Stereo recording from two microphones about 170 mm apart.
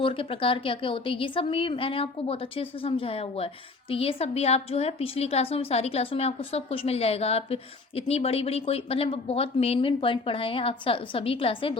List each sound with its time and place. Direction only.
0.0 s a woman's voice: 30° left (ahead or behind)